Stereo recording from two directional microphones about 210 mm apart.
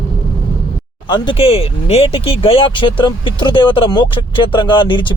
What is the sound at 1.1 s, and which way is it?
Speech, 20° left (ahead or behind).